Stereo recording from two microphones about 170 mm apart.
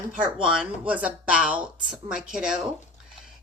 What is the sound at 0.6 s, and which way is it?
A woman's voice, 10° right (ahead or behind).